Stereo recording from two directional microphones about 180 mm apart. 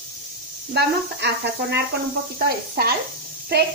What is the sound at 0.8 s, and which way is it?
Speech, 70° right (ahead or behind).